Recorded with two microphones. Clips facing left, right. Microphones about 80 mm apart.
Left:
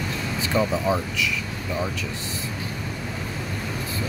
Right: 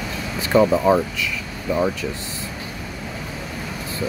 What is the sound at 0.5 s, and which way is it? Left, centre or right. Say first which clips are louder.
Speech: right 8 dB; right.